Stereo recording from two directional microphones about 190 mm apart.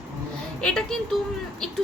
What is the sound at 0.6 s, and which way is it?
Speech, 5° left (ahead or behind).